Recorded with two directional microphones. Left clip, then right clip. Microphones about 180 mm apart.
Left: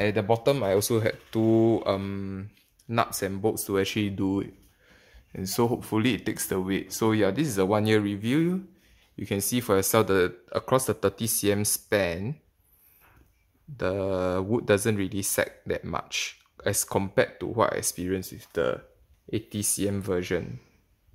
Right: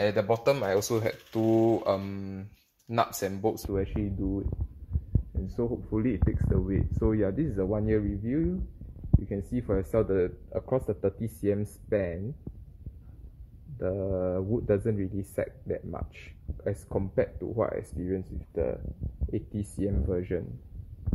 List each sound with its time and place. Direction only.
0.0 s speech: 25° left (ahead or behind)
5.4 s speech: 25° left (ahead or behind); by 7.5 s 10° left (ahead or behind)
7.5 s speech: 20° left (ahead or behind)
13.7 s speech: 20° left (ahead or behind)